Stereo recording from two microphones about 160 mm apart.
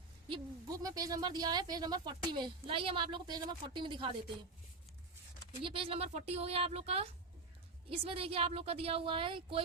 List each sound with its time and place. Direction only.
0.3 s speech: 25° right (ahead or behind)
5.6 s a woman's voice: 35° right (ahead or behind)